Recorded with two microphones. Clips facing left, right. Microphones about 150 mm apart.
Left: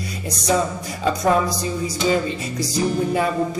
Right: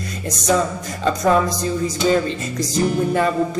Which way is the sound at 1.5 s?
45° right (ahead or behind).